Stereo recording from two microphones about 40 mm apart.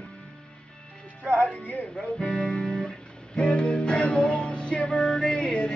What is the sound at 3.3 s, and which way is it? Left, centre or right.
Music, left.